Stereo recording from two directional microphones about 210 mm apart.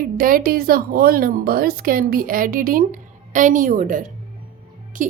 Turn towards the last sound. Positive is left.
turn(degrees=-40)  # may be behind; listen again after turning